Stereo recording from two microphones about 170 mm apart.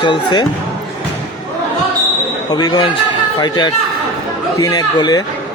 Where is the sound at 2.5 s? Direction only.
25° left (ahead or behind).